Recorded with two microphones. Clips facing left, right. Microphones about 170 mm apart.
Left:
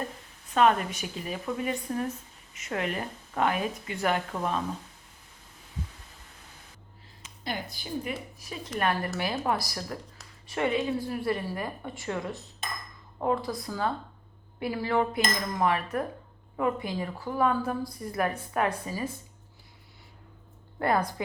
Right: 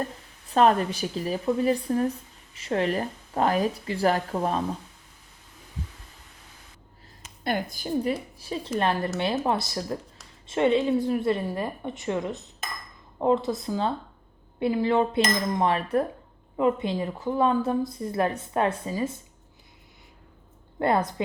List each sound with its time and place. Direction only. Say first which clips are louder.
0.5 s speech: right 3 dB; 35° right (ahead or behind)
7.2 s speech: right 7 dB; 50° right (ahead or behind)
8.4 s a woman's voice: right 5 dB; 30° right (ahead or behind)
20.7 s a woman's voice: right 3 dB; 25° right (ahead or behind)